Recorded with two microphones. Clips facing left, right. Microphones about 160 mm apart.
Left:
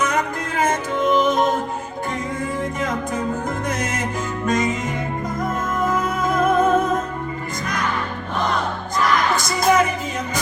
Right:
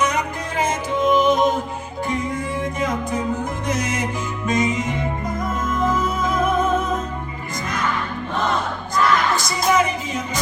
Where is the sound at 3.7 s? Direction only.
55° left (ahead or behind).